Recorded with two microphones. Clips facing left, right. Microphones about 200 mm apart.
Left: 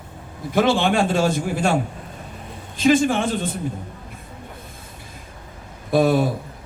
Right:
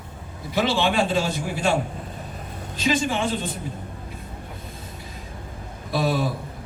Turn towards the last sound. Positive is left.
turn(degrees=50)  # may be behind; listen again after turning